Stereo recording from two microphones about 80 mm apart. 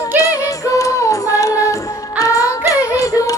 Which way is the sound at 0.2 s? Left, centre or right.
Left.